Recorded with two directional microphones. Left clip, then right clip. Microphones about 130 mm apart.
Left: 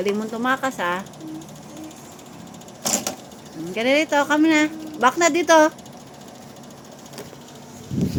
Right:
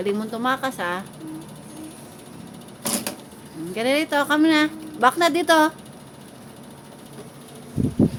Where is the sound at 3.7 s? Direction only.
5° left (ahead or behind).